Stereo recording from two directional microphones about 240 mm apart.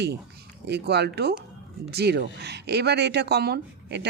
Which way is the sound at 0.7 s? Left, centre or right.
Right.